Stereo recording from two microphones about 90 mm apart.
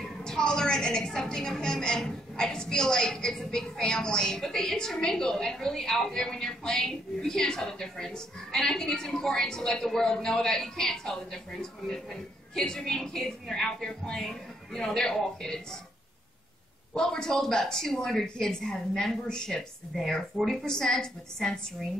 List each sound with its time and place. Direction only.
0.0 s a woman's voice: 5° left (ahead or behind)
16.9 s a woman's voice: 5° left (ahead or behind)